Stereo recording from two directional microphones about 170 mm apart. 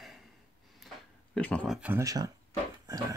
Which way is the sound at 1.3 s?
5° left (ahead or behind).